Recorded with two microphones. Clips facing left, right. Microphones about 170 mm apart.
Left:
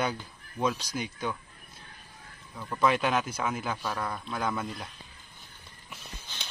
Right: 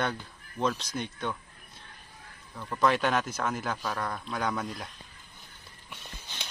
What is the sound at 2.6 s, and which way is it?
Speech, centre (ahead or behind).